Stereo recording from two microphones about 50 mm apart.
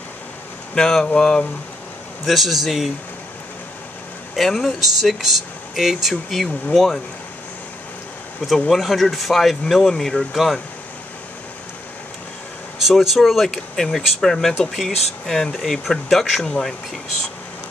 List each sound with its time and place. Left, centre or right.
0.7 s speech: centre
2.2 s speech: centre
4.4 s speech: centre
8.5 s speech: centre
12.8 s speech: centre